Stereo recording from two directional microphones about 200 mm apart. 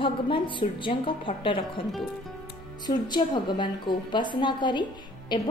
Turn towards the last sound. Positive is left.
turn(degrees=20)  # may be behind; listen again after turning